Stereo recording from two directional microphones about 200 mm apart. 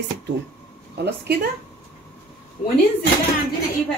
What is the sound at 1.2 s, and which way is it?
Speech, 50° right (ahead or behind).